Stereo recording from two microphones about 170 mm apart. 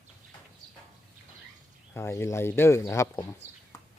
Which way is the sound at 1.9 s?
15° left (ahead or behind).